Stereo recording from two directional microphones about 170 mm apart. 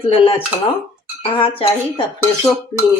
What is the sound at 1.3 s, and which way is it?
Speech, 30° left (ahead or behind).